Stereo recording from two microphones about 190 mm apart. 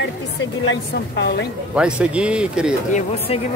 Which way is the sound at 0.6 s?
70° left (ahead or behind).